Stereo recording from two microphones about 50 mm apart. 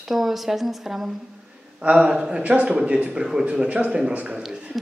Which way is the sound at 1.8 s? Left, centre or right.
Right.